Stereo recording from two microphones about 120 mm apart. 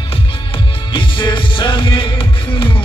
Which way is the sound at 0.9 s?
40° left (ahead or behind).